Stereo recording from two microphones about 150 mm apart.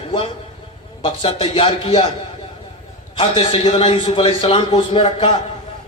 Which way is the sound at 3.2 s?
35° left (ahead or behind).